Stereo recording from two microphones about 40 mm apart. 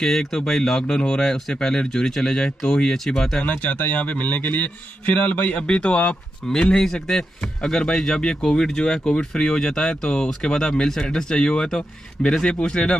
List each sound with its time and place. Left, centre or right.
0.0 s speech: centre
3.4 s a man's voice: left
5.6 s speech: left
6.4 s speech: centre